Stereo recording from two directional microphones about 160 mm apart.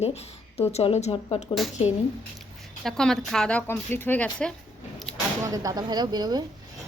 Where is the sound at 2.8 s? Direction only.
5° left (ahead or behind).